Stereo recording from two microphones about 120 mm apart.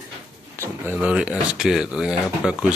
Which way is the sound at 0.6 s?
15° right (ahead or behind).